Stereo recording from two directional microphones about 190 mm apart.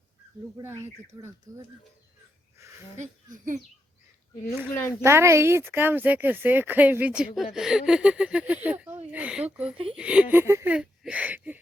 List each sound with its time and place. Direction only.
0.6 s speech: 15° right (ahead or behind)
2.6 s a sound: 15° right (ahead or behind)
3.0 s speech: 40° right (ahead or behind)
4.7 s speech: 10° left (ahead or behind)
5.0 s speech: 15° right (ahead or behind)
9.7 s speech: 30° right (ahead or behind)
10.0 s speech: 5° right (ahead or behind)